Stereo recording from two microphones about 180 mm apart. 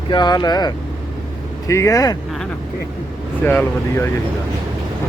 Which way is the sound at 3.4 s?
10° left (ahead or behind).